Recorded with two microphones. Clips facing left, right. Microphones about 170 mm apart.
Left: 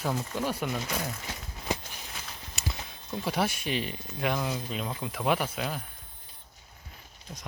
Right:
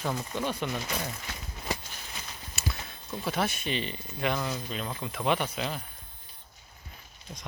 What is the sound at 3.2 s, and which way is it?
Speech, 10° left (ahead or behind).